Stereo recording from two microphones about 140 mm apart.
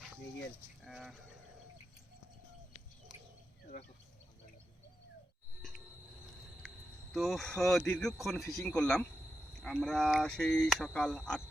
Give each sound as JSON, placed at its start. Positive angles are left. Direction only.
{"t": 0.9, "sound": "speech", "side_deg": 0}
{"t": 7.1, "sound": "speech", "side_deg": 0}